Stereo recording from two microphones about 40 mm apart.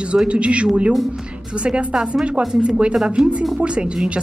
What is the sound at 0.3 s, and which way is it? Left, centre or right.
Speech, right.